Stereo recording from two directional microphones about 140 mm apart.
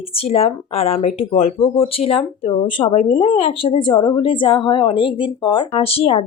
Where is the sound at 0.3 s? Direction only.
45° left (ahead or behind).